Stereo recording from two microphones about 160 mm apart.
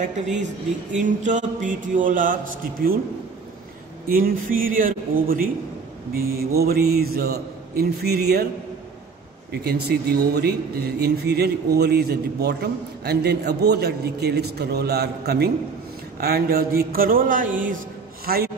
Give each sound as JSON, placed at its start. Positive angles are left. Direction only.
{"t": 0.0, "sound": "a woman's voice", "side_deg": -50}
{"t": 4.1, "sound": "a man's voice", "side_deg": -60}
{"t": 6.5, "sound": "a man's voice", "side_deg": -75}
{"t": 9.5, "sound": "a man's voice", "side_deg": -90}
{"t": 16.2, "sound": "a man's voice", "side_deg": -75}
{"t": 18.2, "sound": "a man's voice", "side_deg": -70}